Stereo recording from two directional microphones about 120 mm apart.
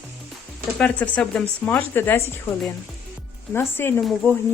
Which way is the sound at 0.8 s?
10° left (ahead or behind).